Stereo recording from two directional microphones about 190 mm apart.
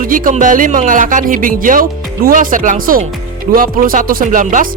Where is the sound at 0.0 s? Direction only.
45° right (ahead or behind).